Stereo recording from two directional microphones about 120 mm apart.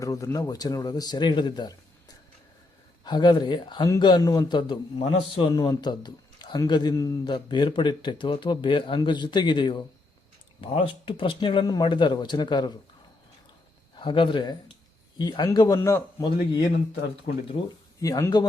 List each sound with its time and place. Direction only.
0.0 s a man's voice: 25° left (ahead or behind)
3.0 s a man's voice: 35° left (ahead or behind)
13.9 s a man's voice: 40° left (ahead or behind); by 16.2 s 25° left (ahead or behind)
17.3 s speech: 50° left (ahead or behind)
18.0 s a man's voice: 25° left (ahead or behind)